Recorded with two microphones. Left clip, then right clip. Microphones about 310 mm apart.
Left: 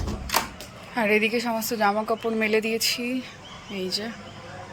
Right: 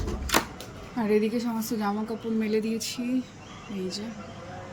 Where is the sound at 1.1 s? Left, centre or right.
Centre.